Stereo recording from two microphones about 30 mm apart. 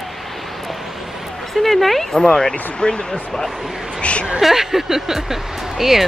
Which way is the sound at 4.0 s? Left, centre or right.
Left.